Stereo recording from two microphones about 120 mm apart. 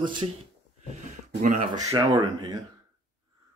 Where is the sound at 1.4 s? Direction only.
90° right.